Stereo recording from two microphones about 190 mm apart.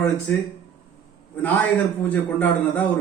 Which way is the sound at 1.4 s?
10° left (ahead or behind).